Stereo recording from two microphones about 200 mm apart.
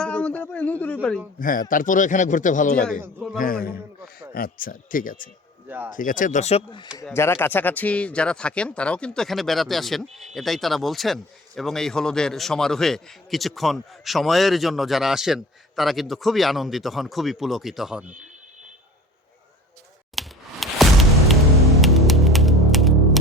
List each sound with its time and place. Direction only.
0.0 s a sound: 5° left (ahead or behind)
1.4 s a man's voice: 45° left (ahead or behind)
3.0 s a man's voice: 10° right (ahead or behind)
3.3 s a man's voice: 45° left (ahead or behind)
3.7 s a sound: 5° right (ahead or behind)
4.4 s a man's voice: 45° left (ahead or behind)
5.6 s speech: 10° right (ahead or behind)
6.0 s speech: 40° left (ahead or behind)
7.1 s speech: 10° left (ahead or behind)
20.1 s music: centre (ahead or behind)